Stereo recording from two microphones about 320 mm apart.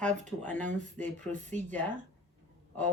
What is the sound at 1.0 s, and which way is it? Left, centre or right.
Speech, centre.